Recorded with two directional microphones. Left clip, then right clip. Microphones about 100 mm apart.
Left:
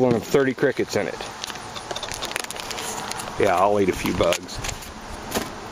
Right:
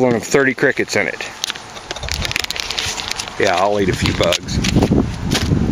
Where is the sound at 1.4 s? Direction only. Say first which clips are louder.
Right 7 dB; 30° right (ahead or behind).